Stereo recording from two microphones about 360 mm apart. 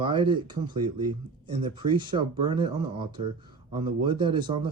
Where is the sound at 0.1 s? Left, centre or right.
Centre.